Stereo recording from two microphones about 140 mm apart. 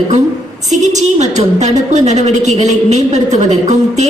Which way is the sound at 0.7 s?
55° right (ahead or behind).